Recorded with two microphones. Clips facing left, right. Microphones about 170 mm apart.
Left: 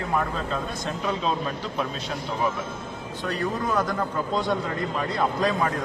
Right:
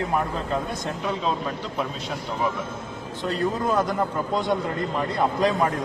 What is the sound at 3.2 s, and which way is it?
A man's voice, 25° right (ahead or behind).